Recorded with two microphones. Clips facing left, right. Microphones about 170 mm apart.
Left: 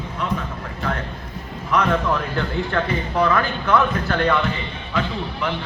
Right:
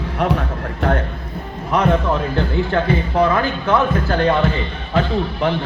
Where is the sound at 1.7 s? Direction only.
30° right (ahead or behind).